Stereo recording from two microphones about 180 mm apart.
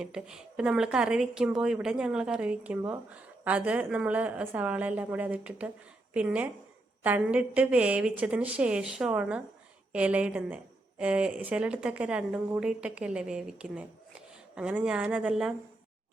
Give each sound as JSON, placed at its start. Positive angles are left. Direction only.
{"t": 0.0, "sound": "a woman's voice", "side_deg": -5}